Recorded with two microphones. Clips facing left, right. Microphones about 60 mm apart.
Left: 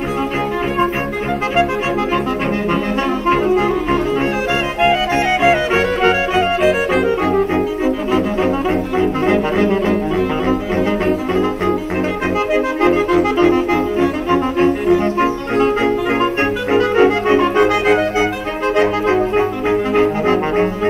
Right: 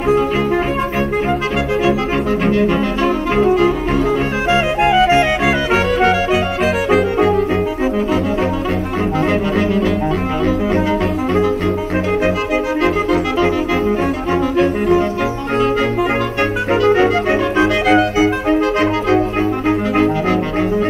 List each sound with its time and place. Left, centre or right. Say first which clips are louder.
3.3 s clarinet: even; left
9.3 s brass instrument: left 1 dB; left
12.8 s music: left 5 dB; left
16.7 s music: even; left